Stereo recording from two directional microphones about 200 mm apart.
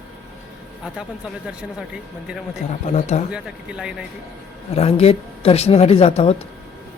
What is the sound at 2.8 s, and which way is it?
Speech, 35° left (ahead or behind).